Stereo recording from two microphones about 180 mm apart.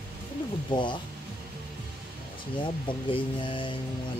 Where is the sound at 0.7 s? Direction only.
25° left (ahead or behind).